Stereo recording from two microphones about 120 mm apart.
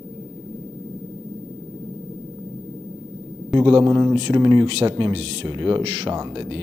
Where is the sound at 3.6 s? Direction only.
45° right (ahead or behind).